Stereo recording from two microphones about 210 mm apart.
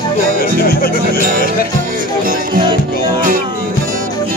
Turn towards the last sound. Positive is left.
turn(degrees=-40)  # may be behind; listen again after turning